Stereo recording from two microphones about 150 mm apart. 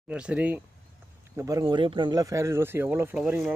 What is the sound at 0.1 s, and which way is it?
Speech, 10° right (ahead or behind).